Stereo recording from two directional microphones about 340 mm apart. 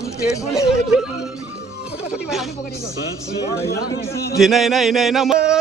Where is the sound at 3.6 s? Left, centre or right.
Left.